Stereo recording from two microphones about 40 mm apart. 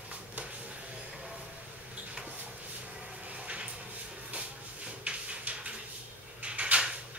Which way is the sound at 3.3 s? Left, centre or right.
Right.